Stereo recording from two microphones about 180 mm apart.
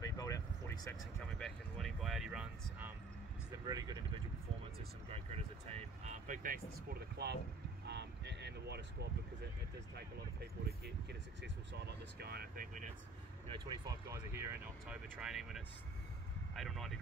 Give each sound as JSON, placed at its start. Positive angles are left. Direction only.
{"t": 0.0, "sound": "vehicle", "side_deg": 20}
{"t": 1.4, "sound": "a sound", "side_deg": 0}
{"t": 3.6, "sound": "vehicle", "side_deg": -20}
{"t": 5.1, "sound": "vehicle", "side_deg": -35}
{"t": 12.2, "sound": "speech", "side_deg": -60}
{"t": 13.5, "sound": "speech", "side_deg": -20}